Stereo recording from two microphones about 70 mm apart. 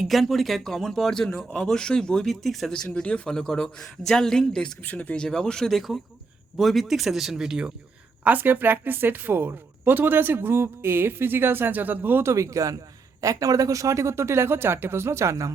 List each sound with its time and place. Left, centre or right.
0.1 s speech: centre
4.8 s speech: left; by 7.7 s centre
8.2 s speech: right
12.2 s speech: right